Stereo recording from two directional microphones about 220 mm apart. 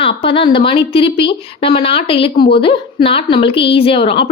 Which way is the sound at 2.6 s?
25° left (ahead or behind).